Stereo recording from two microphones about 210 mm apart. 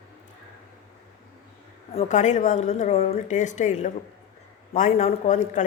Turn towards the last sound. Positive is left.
turn(degrees=35)  # may be behind; listen again after turning